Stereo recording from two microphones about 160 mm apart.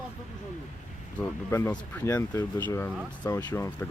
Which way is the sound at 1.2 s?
15° left (ahead or behind).